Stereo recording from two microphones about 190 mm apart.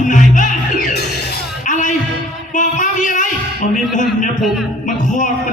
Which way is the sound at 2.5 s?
40° left (ahead or behind).